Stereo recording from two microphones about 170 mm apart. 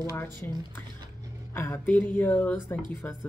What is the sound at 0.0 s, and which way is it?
Speech, 15° left (ahead or behind).